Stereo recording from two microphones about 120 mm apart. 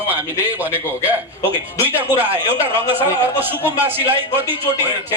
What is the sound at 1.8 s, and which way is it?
A man's voice, 15° right (ahead or behind).